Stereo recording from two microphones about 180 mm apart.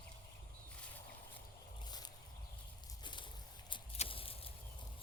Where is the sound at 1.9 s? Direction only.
20° left (ahead or behind).